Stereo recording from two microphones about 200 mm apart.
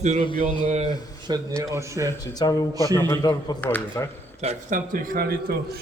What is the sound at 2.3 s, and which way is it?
A man's voice, 20° left (ahead or behind).